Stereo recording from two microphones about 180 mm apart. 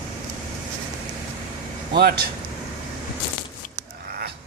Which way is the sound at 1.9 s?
60° right (ahead or behind).